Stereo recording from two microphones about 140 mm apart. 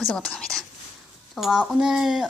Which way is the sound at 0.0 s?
Centre (ahead or behind).